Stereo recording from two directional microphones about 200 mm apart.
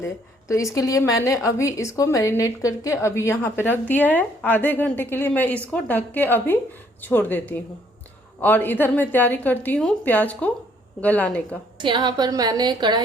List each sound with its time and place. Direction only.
0.0 s a woman's voice: 15° left (ahead or behind)
11.8 s a woman's voice: 25° right (ahead or behind)